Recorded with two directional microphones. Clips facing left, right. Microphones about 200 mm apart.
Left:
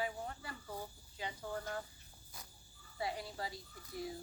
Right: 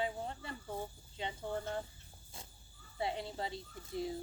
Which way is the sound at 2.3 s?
25° right (ahead or behind).